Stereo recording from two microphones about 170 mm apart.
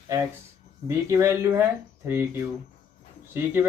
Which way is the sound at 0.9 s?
15° right (ahead or behind).